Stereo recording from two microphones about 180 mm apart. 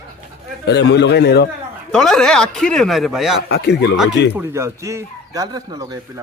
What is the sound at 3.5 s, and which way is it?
Speech, 70° left (ahead or behind).